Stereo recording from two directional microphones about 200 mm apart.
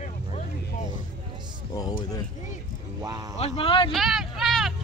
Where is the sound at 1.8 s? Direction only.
20° left (ahead or behind).